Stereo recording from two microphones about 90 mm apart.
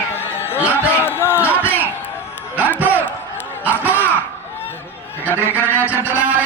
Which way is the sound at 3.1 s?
25° left (ahead or behind).